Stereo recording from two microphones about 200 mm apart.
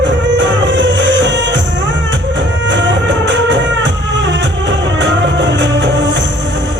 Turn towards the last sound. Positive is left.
turn(degrees=-60)  # may be behind; listen again after turning